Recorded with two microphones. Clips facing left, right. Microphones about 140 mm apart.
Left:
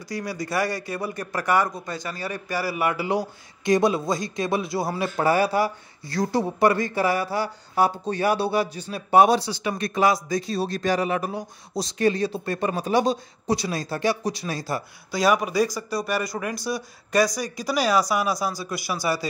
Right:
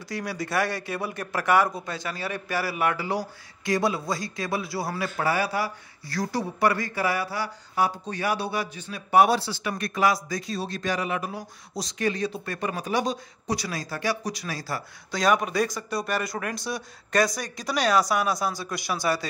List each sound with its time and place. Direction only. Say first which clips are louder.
0.1 s speech: left 1 dB; centre (ahead or behind)
3.1 s a man's voice: left 4 dB; 20° left (ahead or behind); by 11.3 s 40° left (ahead or behind)
11.3 s a man's voice: left 5 dB; 30° left (ahead or behind)
15.0 s speech: left 2 dB; 5° left (ahead or behind)